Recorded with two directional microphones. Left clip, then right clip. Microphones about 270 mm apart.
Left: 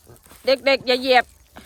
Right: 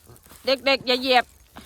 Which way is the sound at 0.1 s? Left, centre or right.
Centre.